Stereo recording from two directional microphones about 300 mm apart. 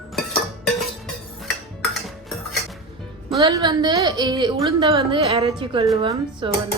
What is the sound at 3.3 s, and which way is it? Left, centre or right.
A woman's voice, centre.